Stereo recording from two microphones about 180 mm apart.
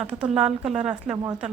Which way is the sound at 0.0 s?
5° right (ahead or behind).